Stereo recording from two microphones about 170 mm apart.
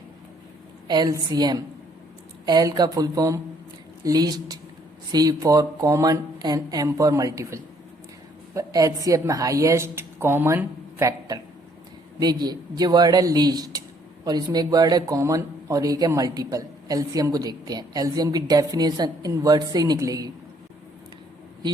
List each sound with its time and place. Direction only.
0.9 s speech: 20° right (ahead or behind)